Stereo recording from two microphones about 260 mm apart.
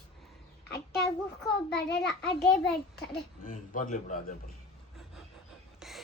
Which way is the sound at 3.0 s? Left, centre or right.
Left.